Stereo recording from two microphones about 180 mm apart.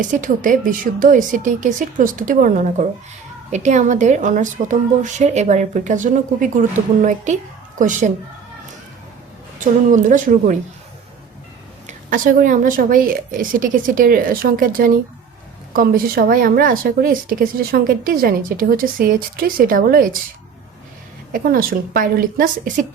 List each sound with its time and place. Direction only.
0.0 s speech: 45° right (ahead or behind)
9.6 s speech: 45° right (ahead or behind)
11.9 s speech: 45° right (ahead or behind)
21.3 s speech: 50° right (ahead or behind)